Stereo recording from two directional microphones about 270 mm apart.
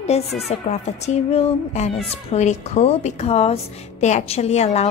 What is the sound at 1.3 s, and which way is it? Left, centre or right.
Speech, left.